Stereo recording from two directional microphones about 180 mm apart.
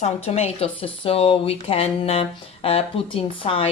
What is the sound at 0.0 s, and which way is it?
Speech, 35° left (ahead or behind).